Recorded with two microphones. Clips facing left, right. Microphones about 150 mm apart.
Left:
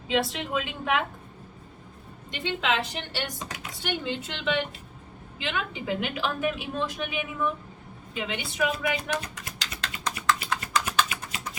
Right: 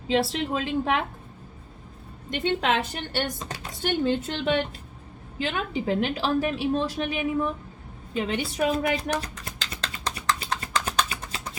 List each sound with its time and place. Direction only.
0.1 s a woman's voice: 35° right (ahead or behind)
2.3 s a woman's voice: 45° right (ahead or behind)
9.4 s typing: 35° right (ahead or behind)